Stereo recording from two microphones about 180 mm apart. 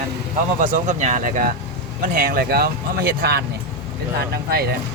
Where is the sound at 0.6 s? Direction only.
40° right (ahead or behind); by 4.7 s 60° right (ahead or behind).